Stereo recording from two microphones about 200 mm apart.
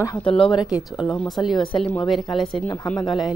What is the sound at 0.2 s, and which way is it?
Speech, 25° left (ahead or behind).